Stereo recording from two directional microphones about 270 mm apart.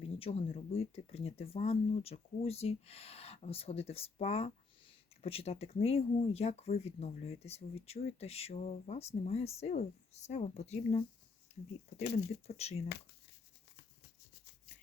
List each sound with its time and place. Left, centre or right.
0.2 s speech: left
12.1 s speech: left